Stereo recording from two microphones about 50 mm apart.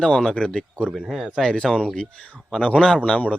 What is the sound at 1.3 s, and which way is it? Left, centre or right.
A man's voice, centre.